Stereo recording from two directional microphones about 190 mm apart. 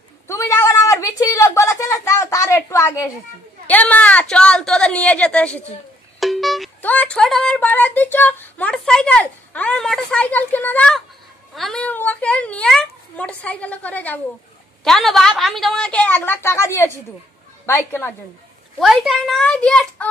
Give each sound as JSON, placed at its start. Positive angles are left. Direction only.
{"t": 0.3, "sound": "a sound", "side_deg": 15}
{"t": 3.6, "sound": "a woman's voice", "side_deg": 10}
{"t": 18.8, "sound": "a woman's voice", "side_deg": 0}